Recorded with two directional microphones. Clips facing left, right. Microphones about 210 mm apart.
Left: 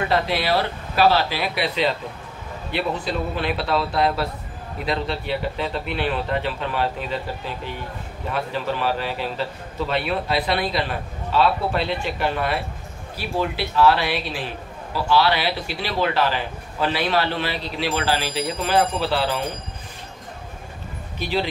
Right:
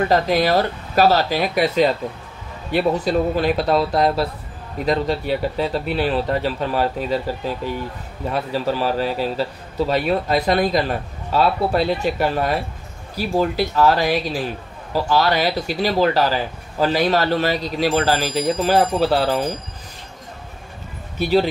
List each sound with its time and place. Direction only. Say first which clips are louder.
0.1 s a man's voice: right 3 dB; 45° right (ahead or behind)
21.2 s speech: right 7 dB; 45° right (ahead or behind)